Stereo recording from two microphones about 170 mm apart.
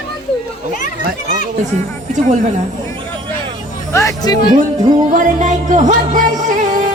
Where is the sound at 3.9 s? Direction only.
20° left (ahead or behind).